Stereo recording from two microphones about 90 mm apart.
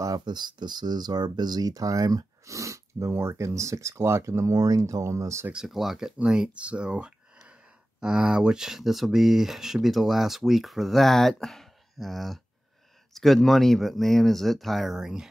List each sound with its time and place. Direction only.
0.0 s speech: 50° right (ahead or behind)
5.5 s speech: 5° right (ahead or behind)